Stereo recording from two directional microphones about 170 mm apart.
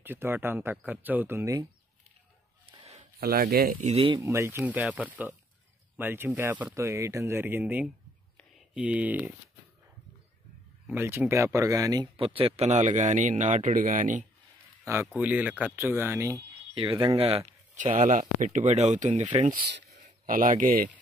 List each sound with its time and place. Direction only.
0.0 s speech: 15° right (ahead or behind)
2.7 s a sound: 35° right (ahead or behind)
3.2 s speech: 65° right (ahead or behind)
3.8 s speech: 35° right (ahead or behind)
4.2 s speech: 15° right (ahead or behind)
10.9 s speech: 15° right (ahead or behind); by 14.2 s 50° right (ahead or behind)
15.1 s speech: 10° right (ahead or behind)
16.7 s speech: 30° right (ahead or behind)
19.2 s speech: 30° right (ahead or behind)
20.2 s speech: 55° right (ahead or behind)